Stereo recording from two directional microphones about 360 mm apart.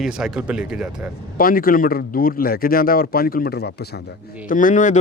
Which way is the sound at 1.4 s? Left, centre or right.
Left.